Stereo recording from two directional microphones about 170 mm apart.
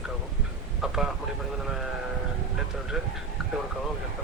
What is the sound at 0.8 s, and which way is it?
Speech, 5° right (ahead or behind).